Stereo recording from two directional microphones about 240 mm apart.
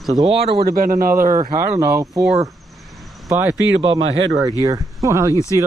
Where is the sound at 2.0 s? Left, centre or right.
Centre.